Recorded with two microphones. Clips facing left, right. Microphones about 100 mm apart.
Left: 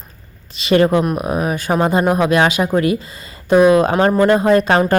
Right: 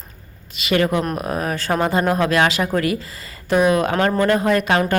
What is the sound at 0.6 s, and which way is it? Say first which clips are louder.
Speech: left 5 dB; 30° left (ahead or behind).